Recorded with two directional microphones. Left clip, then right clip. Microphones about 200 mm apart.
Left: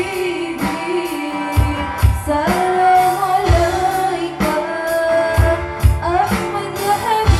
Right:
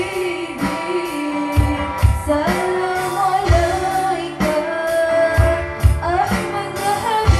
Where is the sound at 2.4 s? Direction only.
25° left (ahead or behind).